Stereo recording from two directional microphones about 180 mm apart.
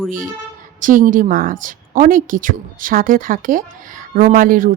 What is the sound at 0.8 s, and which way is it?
A woman's voice, 50° right (ahead or behind).